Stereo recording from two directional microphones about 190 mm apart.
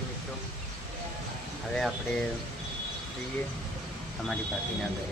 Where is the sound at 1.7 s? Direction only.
Centre (ahead or behind).